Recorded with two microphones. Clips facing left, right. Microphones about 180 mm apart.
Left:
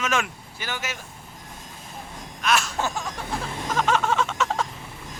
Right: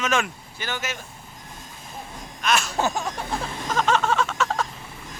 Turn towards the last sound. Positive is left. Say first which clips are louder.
# even
turn(degrees=20)  # may be behind; listen again after turning